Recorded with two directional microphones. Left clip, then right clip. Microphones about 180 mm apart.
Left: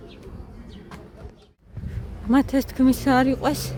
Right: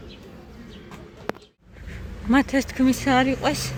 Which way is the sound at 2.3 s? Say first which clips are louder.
Even; 20° left (ahead or behind).